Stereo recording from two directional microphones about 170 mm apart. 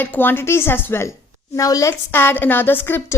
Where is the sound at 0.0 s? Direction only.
10° left (ahead or behind).